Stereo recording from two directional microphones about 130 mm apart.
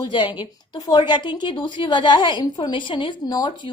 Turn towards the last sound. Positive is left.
turn(degrees=35)  # may be behind; listen again after turning